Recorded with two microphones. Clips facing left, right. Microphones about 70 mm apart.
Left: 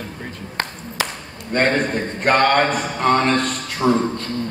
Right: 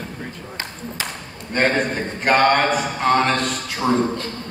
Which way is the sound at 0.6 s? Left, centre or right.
Left.